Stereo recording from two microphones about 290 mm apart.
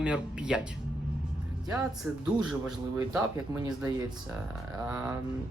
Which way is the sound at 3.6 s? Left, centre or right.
Centre.